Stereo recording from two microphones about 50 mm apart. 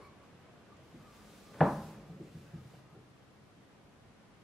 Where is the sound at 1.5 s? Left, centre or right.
Centre.